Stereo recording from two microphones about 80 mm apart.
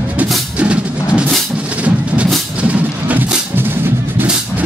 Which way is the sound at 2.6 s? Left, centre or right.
Centre.